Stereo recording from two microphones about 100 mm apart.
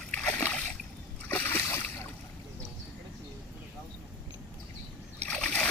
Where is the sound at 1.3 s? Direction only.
25° left (ahead or behind).